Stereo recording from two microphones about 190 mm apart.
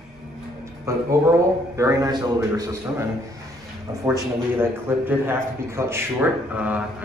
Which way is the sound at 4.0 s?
15° right (ahead or behind).